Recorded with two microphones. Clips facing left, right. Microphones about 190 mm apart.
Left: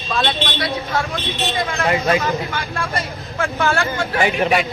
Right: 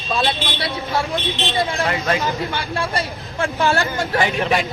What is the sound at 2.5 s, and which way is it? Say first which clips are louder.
Speech: right 1 dB; 30° right (ahead or behind).